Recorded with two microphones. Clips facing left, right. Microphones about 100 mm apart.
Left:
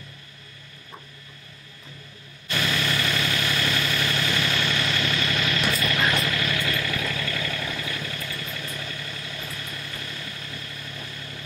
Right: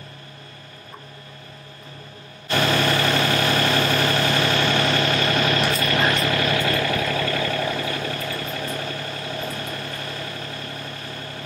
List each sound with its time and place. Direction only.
2.5 s vehicle: 45° right (ahead or behind)